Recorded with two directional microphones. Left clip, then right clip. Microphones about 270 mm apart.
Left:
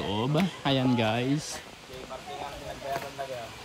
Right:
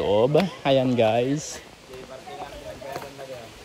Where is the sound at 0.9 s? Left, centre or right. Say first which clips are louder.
Right 7 dB; centre.